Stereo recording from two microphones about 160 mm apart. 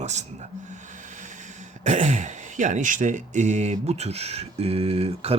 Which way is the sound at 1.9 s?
50° right (ahead or behind).